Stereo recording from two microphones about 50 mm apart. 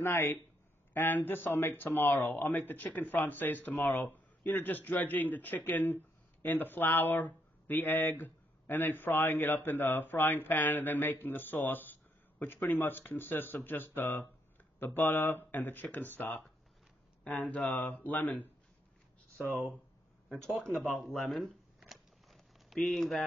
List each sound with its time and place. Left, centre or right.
0.0 s speech: left
20.2 s speech: centre
21.7 s a sound: centre